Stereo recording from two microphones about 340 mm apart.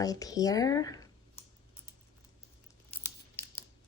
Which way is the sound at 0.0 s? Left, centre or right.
Centre.